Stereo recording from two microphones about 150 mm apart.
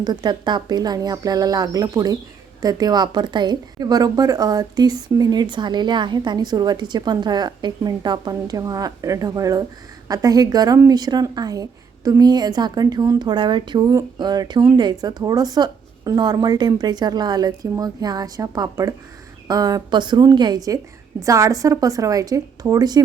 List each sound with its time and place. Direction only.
0.0 s a woman's voice: 30° right (ahead or behind)